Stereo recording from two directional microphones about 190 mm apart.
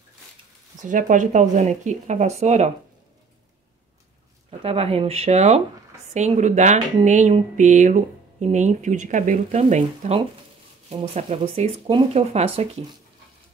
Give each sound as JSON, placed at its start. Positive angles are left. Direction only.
{"t": 0.8, "sound": "speech", "side_deg": -45}
{"t": 4.5, "sound": "speech", "side_deg": -30}